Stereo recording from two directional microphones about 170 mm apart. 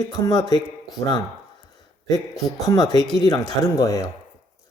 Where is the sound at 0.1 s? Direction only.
25° left (ahead or behind).